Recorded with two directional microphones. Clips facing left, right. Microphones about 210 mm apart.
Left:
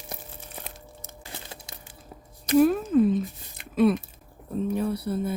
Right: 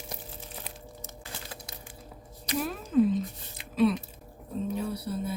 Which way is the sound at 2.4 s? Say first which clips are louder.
Left 13 dB; 50° left (ahead or behind).